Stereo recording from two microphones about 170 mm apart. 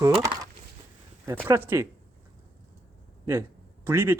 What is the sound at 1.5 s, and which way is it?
Speech, 15° right (ahead or behind).